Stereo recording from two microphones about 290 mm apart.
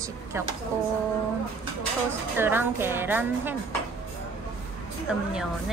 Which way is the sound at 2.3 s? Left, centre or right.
Centre.